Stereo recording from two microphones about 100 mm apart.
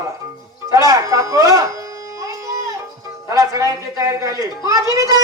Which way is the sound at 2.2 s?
30° right (ahead or behind).